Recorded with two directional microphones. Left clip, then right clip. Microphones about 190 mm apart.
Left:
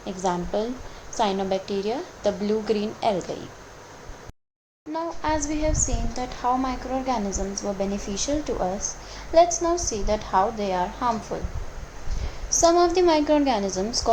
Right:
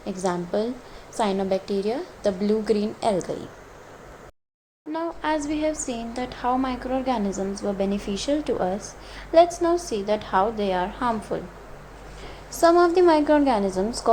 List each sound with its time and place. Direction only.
0.0 s a woman's voice: 25° right (ahead or behind)
4.9 s a sound: 30° right (ahead or behind)
5.5 s a woman's voice: 30° right (ahead or behind)
7.3 s a woman's voice: 55° right (ahead or behind)
7.8 s a woman's voice: 30° right (ahead or behind)
12.6 s a woman's voice: 20° right (ahead or behind)